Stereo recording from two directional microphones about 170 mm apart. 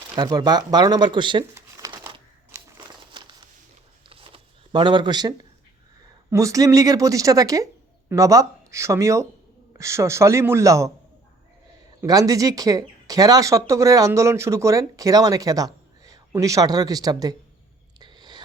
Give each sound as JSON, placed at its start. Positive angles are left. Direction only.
{"t": 0.2, "sound": "speech", "side_deg": -25}
{"t": 1.5, "sound": "crumpling", "side_deg": -25}
{"t": 3.1, "sound": "a sound", "side_deg": -25}
{"t": 6.3, "sound": "speech", "side_deg": -20}
{"t": 12.0, "sound": "speech", "side_deg": -20}
{"t": 18.0, "sound": "whispering", "side_deg": -25}